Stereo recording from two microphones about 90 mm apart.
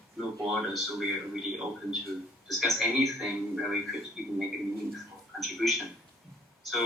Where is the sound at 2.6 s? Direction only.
Centre (ahead or behind).